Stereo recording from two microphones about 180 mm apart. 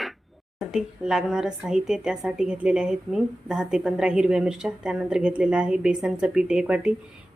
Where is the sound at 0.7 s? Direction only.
5° right (ahead or behind).